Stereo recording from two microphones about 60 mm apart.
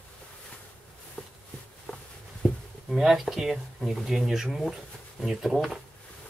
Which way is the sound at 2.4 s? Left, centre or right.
Centre.